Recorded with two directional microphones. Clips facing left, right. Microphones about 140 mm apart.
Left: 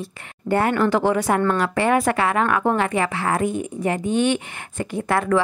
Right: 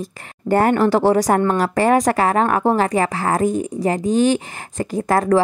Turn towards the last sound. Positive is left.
turn(degrees=-40)  # may be behind; listen again after turning